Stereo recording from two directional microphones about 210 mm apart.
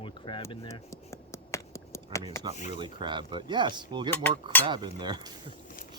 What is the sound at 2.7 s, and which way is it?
Speech, 20° right (ahead or behind).